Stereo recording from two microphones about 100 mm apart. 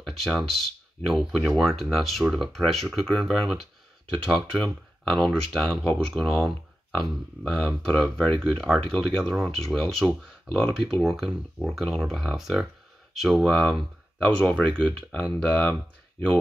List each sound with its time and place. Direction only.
0.0 s speech: centre (ahead or behind)